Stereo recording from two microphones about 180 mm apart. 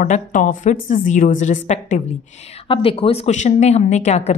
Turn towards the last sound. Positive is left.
turn(degrees=35)  # may be behind; listen again after turning